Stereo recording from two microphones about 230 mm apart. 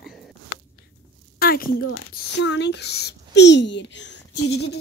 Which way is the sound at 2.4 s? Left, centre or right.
Left.